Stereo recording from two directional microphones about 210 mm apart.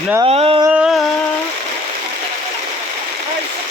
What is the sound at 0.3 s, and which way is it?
Speech, 25° right (ahead or behind).